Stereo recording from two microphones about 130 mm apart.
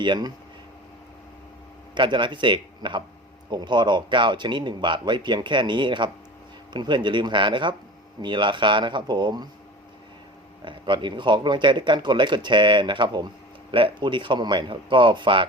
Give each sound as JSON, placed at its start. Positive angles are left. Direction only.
{"t": 0.0, "sound": "speech", "side_deg": -35}
{"t": 2.0, "sound": "speech", "side_deg": -35}
{"t": 10.6, "sound": "speech", "side_deg": -35}